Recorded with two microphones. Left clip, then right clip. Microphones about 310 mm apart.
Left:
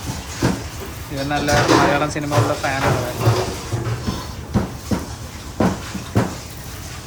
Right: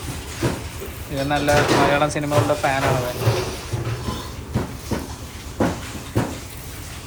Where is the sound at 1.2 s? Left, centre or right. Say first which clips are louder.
Left 1 dB; centre.